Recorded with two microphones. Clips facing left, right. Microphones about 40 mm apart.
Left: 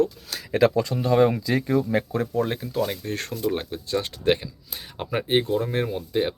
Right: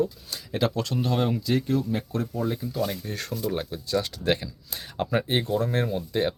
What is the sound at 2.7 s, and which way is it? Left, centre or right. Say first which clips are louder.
Speech: left 3 dB; left.